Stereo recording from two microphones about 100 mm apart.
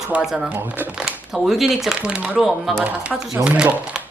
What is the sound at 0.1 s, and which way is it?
Speech, 5° right (ahead or behind).